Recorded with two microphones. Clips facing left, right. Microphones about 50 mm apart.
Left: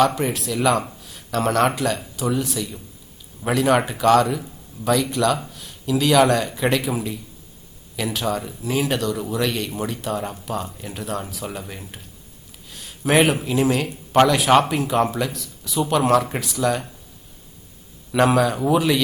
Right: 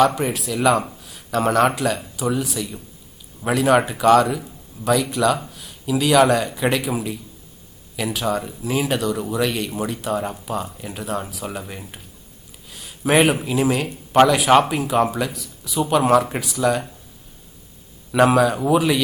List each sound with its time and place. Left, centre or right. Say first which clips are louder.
0.0 s speech: right 1 dB; centre
18.1 s speech: right 2 dB; centre